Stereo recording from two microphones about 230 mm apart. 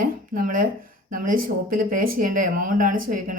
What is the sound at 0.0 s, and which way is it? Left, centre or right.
Speech, right.